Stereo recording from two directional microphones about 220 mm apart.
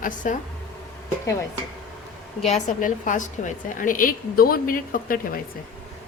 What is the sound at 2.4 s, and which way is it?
A woman's voice, 35° left (ahead or behind).